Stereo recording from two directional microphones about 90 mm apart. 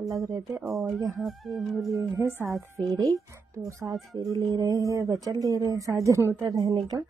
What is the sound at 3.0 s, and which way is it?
A woman's voice, 35° right (ahead or behind).